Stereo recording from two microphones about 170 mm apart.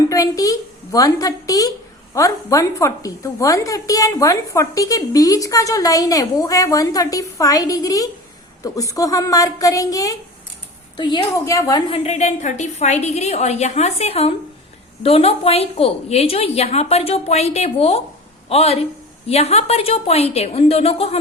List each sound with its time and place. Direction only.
0.1 s a woman's voice: 20° left (ahead or behind)
11.9 s a woman's voice: 40° left (ahead or behind)